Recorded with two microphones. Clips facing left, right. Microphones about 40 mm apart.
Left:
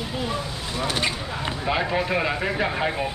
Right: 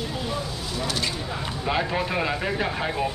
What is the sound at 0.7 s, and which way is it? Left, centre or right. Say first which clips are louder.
Speech: left 3 dB; left.